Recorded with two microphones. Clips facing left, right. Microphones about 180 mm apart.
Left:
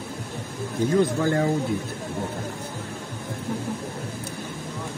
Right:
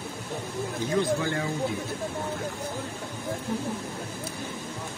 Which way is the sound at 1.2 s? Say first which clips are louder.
Left 7 dB; 45° left (ahead or behind).